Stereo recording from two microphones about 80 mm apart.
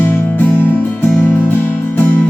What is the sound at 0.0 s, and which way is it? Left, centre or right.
Music, left.